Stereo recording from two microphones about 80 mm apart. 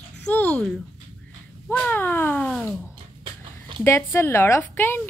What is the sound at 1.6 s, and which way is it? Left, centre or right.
Speech, left.